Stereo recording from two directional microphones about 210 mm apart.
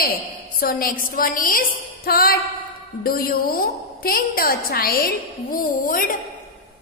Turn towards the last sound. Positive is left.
turn(degrees=40)  # may be behind; listen again after turning